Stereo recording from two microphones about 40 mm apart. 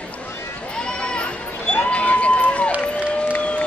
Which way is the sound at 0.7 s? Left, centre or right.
Left.